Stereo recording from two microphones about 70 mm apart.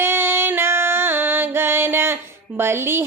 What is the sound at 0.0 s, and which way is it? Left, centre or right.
Music, right.